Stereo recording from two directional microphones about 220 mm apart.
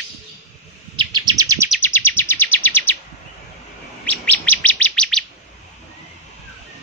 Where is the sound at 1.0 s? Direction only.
20° right (ahead or behind).